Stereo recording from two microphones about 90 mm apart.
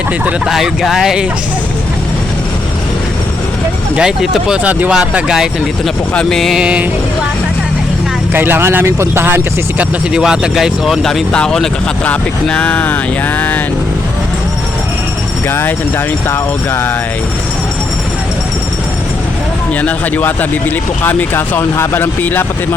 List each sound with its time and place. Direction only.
0.4 s speech: 5° right (ahead or behind)
3.9 s speech: 5° right (ahead or behind)
4.9 s speech: 5° right (ahead or behind)
6.6 s speech: 10° right (ahead or behind)
8.3 s speech: 25° right (ahead or behind)
10.1 s speech: 10° right (ahead or behind)
12.0 s a sound: 15° left (ahead or behind)
15.4 s speech: 25° left (ahead or behind)
19.8 s speech: 20° left (ahead or behind)